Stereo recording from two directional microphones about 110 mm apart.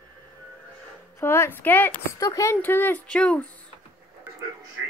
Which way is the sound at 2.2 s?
30° left (ahead or behind).